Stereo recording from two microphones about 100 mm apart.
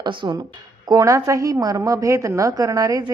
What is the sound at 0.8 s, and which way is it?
A woman's voice, 35° right (ahead or behind).